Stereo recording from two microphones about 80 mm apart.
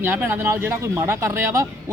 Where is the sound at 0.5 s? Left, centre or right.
Right.